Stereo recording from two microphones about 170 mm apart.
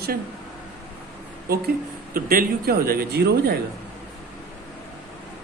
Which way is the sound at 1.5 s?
60° right (ahead or behind).